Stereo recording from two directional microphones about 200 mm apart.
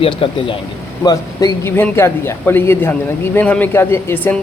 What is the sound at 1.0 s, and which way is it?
Speech, 15° left (ahead or behind).